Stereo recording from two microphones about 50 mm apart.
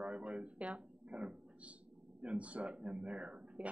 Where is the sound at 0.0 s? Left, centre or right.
Right.